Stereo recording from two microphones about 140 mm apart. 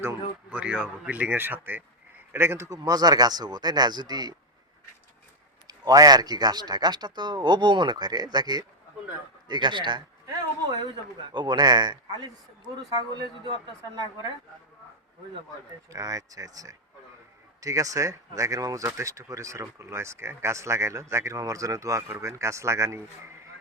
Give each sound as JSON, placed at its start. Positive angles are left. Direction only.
{"t": 0.0, "sound": "speech", "side_deg": -10}
{"t": 5.6, "sound": "speech", "side_deg": -25}
{"t": 11.3, "sound": "speech", "side_deg": -30}
{"t": 15.9, "sound": "speech", "side_deg": -25}